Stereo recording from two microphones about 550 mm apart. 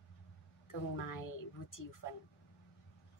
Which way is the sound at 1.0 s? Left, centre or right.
Left.